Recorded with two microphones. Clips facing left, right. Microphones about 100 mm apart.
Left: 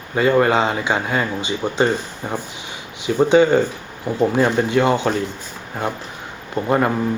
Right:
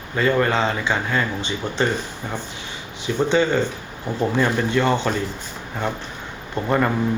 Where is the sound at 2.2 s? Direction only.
30° left (ahead or behind).